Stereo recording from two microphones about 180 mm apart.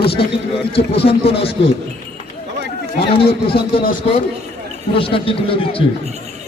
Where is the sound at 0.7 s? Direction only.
30° left (ahead or behind).